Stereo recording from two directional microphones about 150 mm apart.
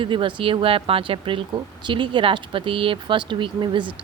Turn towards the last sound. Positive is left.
turn(degrees=-30)  # may be behind; listen again after turning